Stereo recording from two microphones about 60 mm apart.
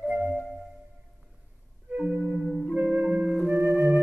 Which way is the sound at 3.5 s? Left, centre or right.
Right.